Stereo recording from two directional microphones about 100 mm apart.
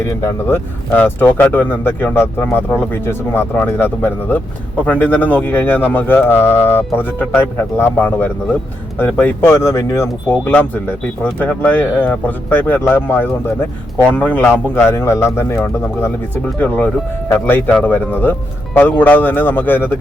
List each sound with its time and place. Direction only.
0.0 s speech: 30° left (ahead or behind)
10.2 s speech: 20° left (ahead or behind)
14.8 s speech: 25° left (ahead or behind)